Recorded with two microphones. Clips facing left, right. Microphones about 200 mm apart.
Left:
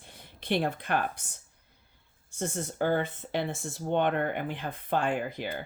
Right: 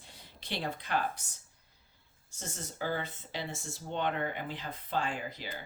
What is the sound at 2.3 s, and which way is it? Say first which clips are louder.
Speech: left 10 dB; 55° left (ahead or behind).